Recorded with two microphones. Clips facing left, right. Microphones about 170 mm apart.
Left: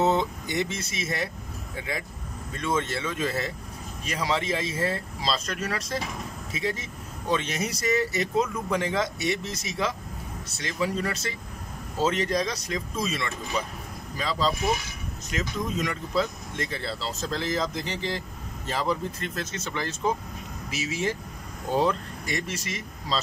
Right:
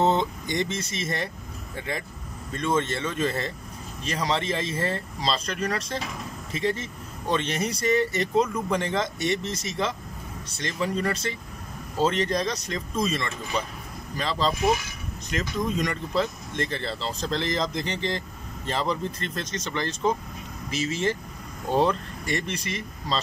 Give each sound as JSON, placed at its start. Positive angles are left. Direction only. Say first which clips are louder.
{"t": 0.0, "sound": "speech", "louder": "right 1 dB", "side_deg": 5}